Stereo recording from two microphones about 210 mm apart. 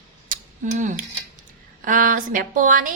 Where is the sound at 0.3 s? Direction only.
35° right (ahead or behind).